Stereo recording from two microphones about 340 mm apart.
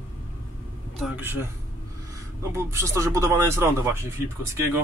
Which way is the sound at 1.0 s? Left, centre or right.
Centre.